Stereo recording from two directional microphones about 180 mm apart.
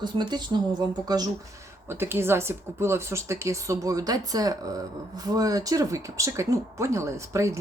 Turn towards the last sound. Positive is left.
turn(degrees=-15)  # may be behind; listen again after turning